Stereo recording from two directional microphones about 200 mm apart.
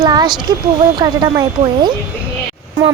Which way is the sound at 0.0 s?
20° right (ahead or behind).